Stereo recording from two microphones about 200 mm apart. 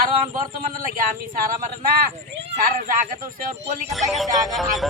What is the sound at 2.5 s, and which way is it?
Speech, 40° right (ahead or behind).